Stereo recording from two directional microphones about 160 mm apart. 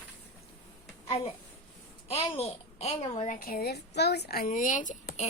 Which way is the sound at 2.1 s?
40° left (ahead or behind).